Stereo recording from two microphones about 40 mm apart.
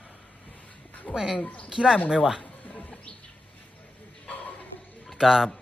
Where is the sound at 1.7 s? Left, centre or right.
Centre.